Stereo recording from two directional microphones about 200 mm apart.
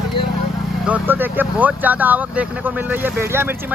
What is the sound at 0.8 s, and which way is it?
Speech, 10° right (ahead or behind).